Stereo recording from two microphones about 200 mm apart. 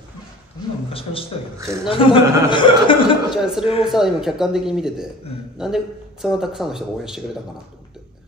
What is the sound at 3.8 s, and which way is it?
Speech, centre (ahead or behind).